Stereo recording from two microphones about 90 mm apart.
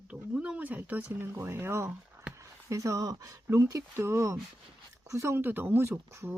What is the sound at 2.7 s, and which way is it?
Speech, 40° right (ahead or behind).